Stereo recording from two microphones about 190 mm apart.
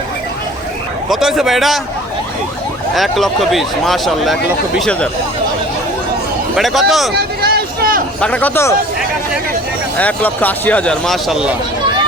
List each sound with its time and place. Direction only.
1.1 s speech: centre (ahead or behind)
2.9 s speech: centre (ahead or behind)
6.6 s speech: centre (ahead or behind)
7.1 s a sound: 55° right (ahead or behind)
8.2 s speech: 5° left (ahead or behind)
10.0 s speech: 10° left (ahead or behind)